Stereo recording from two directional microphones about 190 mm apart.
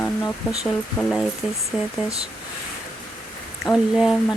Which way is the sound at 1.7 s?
Centre (ahead or behind).